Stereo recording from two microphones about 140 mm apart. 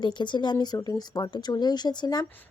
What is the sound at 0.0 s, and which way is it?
Speech, 35° left (ahead or behind).